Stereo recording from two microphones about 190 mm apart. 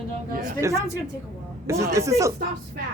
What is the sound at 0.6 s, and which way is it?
Speech, 15° right (ahead or behind).